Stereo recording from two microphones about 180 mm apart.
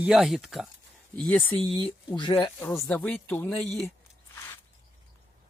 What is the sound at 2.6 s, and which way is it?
Speech, 5° left (ahead or behind).